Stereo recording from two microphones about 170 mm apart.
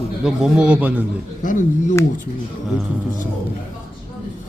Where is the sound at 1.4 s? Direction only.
50° left (ahead or behind).